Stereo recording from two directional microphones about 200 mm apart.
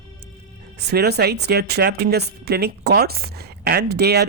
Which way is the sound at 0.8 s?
55° right (ahead or behind).